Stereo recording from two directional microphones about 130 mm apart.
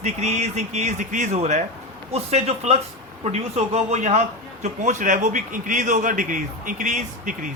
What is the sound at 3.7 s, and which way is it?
A man's voice, 60° right (ahead or behind).